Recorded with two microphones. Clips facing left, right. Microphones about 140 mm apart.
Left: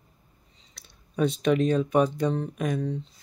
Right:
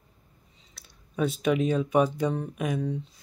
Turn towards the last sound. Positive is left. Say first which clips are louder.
# left 1 dB
turn(degrees=-10)  # may be behind; listen again after turning